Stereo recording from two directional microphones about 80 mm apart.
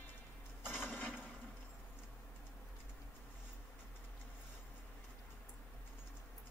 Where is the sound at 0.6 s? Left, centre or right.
Centre.